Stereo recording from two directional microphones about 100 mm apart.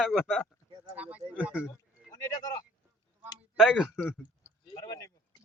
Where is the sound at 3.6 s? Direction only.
5° right (ahead or behind).